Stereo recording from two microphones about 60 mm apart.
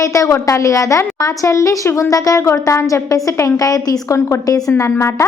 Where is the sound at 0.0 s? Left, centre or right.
Left.